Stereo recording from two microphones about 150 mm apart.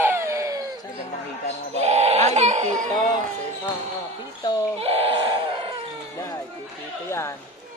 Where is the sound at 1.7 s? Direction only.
45° right (ahead or behind).